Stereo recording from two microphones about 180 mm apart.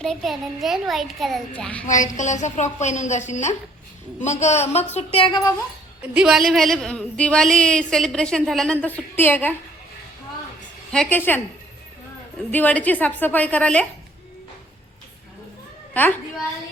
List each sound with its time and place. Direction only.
0.0 s a woman's voice: centre (ahead or behind)
1.9 s a woman's voice: 45° left (ahead or behind); by 5.5 s 25° left (ahead or behind)
6.1 s a woman's voice: centre (ahead or behind)
10.9 s a woman's voice: 5° left (ahead or behind)
12.5 s a woman's voice: 10° left (ahead or behind)
16.0 s a woman's voice: 10° left (ahead or behind)